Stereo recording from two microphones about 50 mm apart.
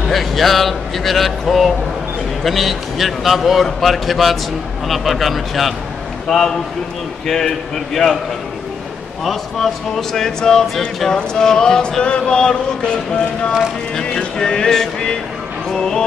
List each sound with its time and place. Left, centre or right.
0.1 s a man's voice: centre
9.2 s speech: centre
14.0 s speech: centre